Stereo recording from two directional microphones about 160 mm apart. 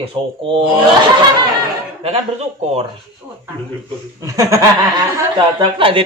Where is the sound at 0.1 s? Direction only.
35° right (ahead or behind).